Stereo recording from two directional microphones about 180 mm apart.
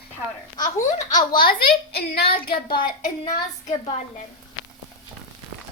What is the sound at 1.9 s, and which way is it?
Speech, 65° left (ahead or behind).